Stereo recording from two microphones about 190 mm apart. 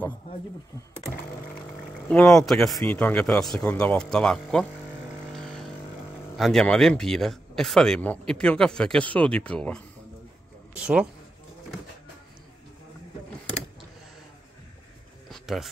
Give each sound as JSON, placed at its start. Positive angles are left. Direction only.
{"t": 2.0, "sound": "speech", "side_deg": 5}
{"t": 5.3, "sound": "vehicle", "side_deg": 0}
{"t": 6.3, "sound": "speech", "side_deg": 0}
{"t": 10.7, "sound": "speech", "side_deg": -5}
{"t": 15.2, "sound": "a sound", "side_deg": 0}